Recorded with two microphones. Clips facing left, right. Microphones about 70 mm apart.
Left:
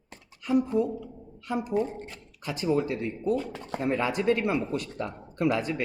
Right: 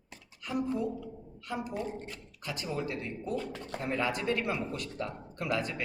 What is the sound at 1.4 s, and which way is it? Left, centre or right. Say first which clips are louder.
Speech: left 8 dB; left.